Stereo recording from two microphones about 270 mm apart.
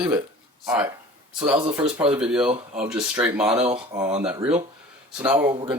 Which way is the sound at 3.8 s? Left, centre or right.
Centre.